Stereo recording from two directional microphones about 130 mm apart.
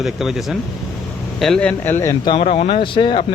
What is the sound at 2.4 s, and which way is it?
Speech, 55° left (ahead or behind).